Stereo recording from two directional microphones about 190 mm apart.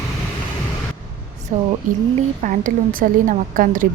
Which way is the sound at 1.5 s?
40° right (ahead or behind).